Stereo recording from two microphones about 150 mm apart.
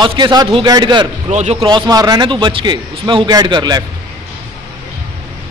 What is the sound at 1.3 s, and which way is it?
Speech, 50° right (ahead or behind).